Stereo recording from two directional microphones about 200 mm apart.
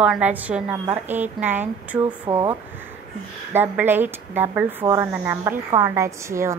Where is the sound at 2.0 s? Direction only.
25° right (ahead or behind).